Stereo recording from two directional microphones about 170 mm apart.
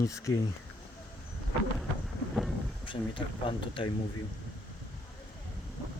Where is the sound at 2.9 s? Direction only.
30° left (ahead or behind).